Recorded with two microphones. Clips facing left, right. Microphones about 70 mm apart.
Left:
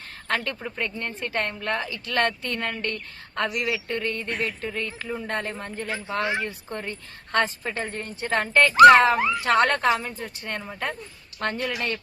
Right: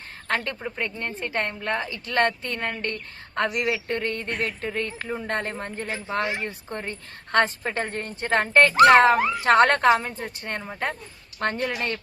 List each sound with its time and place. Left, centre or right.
0.3 s a woman's voice: right
1.9 s a woman's voice: right
7.3 s speech: right